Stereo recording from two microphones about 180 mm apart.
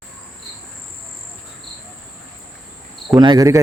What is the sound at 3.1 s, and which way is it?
Speech, 20° right (ahead or behind).